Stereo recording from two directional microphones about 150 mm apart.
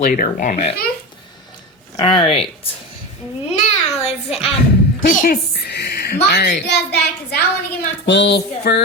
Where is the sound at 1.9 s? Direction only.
30° left (ahead or behind).